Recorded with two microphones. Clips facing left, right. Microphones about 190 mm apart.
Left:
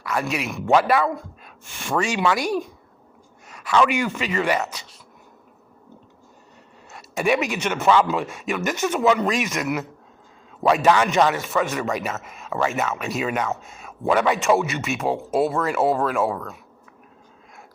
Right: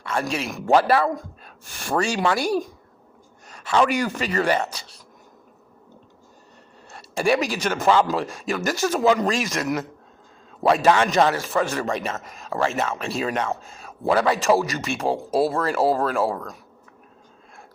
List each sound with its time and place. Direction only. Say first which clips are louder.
0.0 s a man's voice: even; 30° right (ahead or behind)
6.9 s a man's voice: even; 30° right (ahead or behind)